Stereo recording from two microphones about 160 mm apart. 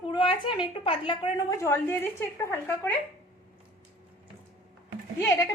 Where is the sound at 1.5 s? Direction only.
15° left (ahead or behind).